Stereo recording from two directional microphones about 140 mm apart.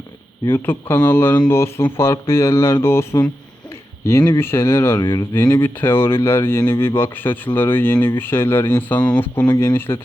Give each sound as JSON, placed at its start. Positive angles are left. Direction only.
{"t": 0.6, "sound": "speech", "side_deg": 15}
{"t": 5.3, "sound": "speech", "side_deg": 15}